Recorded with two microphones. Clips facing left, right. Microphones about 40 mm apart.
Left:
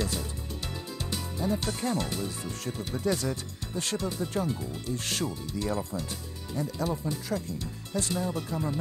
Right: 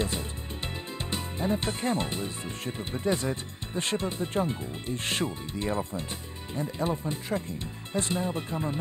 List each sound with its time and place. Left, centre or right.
0.0 s music: right
1.1 s speech: right